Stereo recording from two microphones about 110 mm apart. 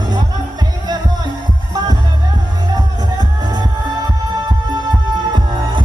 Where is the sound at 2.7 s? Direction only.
40° right (ahead or behind).